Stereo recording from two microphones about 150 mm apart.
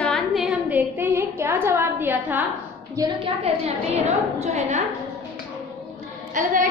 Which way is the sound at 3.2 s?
45° right (ahead or behind).